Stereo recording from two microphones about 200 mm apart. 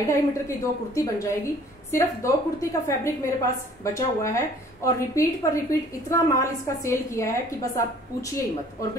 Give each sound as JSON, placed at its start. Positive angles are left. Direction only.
{"t": 0.1, "sound": "a woman's voice", "side_deg": 15}